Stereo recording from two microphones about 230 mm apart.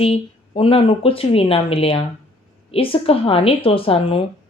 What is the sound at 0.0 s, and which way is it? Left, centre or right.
A woman's voice, left.